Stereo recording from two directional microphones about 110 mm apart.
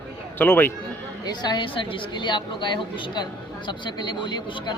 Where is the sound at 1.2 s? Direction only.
40° left (ahead or behind).